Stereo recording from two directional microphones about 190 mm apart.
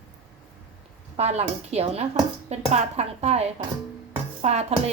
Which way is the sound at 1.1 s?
35° right (ahead or behind).